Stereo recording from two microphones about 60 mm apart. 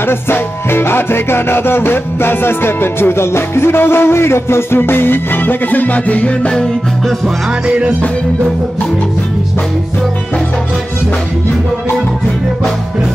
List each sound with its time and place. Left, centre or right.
0.1 s music: left
7.6 s music: centre